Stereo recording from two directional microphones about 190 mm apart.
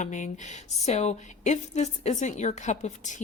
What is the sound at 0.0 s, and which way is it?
A woman's voice, 40° left (ahead or behind).